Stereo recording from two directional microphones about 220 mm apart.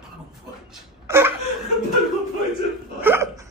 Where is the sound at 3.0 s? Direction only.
10° right (ahead or behind).